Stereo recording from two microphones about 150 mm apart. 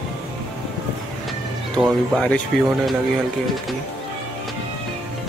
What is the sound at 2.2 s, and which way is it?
Speech, 5° left (ahead or behind).